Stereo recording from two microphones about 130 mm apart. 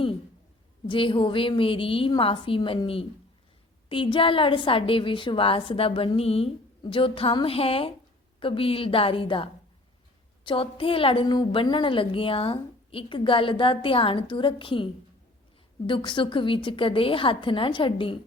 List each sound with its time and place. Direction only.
0.9 s a woman's voice: 40° left (ahead or behind)
15.9 s a woman's voice: 40° left (ahead or behind)